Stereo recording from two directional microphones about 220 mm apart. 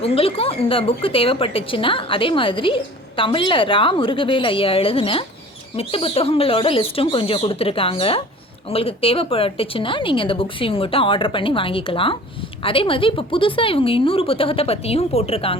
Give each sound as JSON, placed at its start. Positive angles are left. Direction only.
{"t": 0.0, "sound": "a woman's voice", "side_deg": 25}